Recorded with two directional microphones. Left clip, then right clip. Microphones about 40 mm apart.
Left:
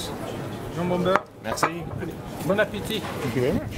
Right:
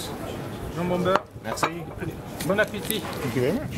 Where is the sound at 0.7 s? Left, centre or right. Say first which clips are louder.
Left 1 dB; right.